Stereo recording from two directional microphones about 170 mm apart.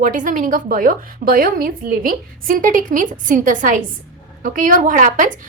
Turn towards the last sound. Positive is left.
turn(degrees=-50)  # may be behind; listen again after turning